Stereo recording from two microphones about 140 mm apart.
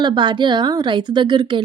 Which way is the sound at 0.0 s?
35° right (ahead or behind).